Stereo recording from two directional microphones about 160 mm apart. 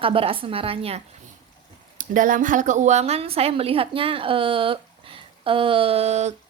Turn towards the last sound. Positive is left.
turn(degrees=-45)  # may be behind; listen again after turning